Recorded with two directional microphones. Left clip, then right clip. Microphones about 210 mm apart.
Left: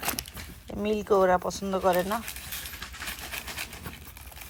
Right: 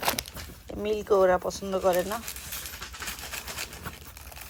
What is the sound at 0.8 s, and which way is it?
Speech, centre (ahead or behind).